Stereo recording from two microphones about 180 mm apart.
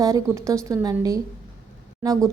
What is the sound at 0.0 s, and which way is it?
Speech, 20° right (ahead or behind).